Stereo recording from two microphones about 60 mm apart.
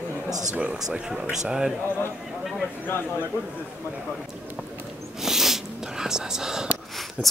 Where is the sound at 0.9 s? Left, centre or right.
Centre.